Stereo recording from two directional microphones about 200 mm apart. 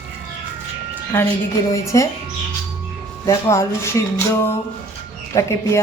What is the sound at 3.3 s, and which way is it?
A woman's voice, 15° left (ahead or behind).